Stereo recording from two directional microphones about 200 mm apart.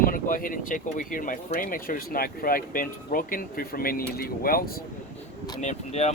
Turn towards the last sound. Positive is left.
turn(degrees=35)  # may be behind; listen again after turning